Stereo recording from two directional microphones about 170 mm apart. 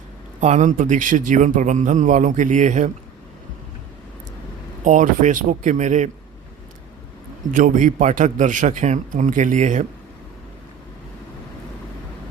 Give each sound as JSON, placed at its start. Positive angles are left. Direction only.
{"t": 0.3, "sound": "a man's voice", "side_deg": -45}
{"t": 4.8, "sound": "a man's voice", "side_deg": -50}
{"t": 7.5, "sound": "a man's voice", "side_deg": -50}